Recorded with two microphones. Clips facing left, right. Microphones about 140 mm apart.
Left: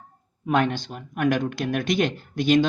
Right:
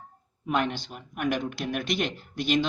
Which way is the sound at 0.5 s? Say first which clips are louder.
Left 5 dB; 45° left (ahead or behind).